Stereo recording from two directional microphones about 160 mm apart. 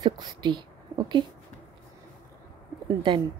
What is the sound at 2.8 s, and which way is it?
Speech, 30° right (ahead or behind).